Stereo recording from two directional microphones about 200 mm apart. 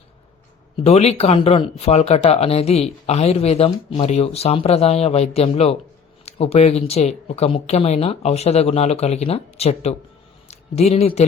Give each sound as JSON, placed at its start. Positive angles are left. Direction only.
{"t": 0.9, "sound": "speech", "side_deg": 30}